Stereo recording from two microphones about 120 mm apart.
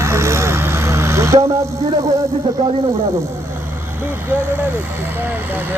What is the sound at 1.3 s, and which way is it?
Speech, 55° right (ahead or behind).